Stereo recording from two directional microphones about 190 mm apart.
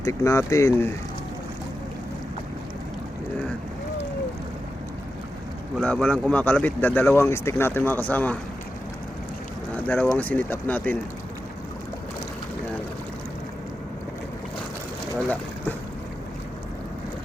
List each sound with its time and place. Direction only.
0.0 s speech: 15° left (ahead or behind)
5.8 s speech: 5° left (ahead or behind)
9.7 s speech: 5° left (ahead or behind)